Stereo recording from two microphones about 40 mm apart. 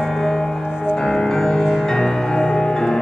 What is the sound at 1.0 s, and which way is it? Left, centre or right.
Music, centre.